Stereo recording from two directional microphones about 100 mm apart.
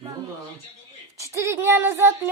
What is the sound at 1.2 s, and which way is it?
A woman's voice, 30° right (ahead or behind).